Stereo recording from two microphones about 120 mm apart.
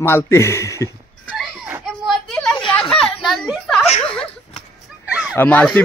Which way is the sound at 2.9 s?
5° left (ahead or behind).